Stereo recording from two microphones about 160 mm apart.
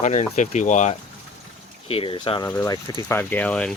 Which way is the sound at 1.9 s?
35° left (ahead or behind).